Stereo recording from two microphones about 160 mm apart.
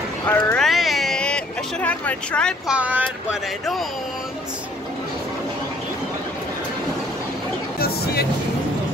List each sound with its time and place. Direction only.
0.3 s a sound: 5° left (ahead or behind)
2.7 s speech: 10° right (ahead or behind)
7.8 s music: 80° left